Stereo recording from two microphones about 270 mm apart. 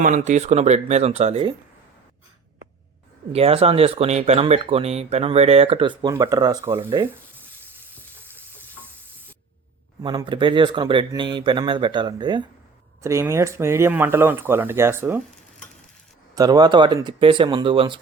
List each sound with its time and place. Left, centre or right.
0.0 s speech: right
3.3 s speech: right
10.0 s speech: centre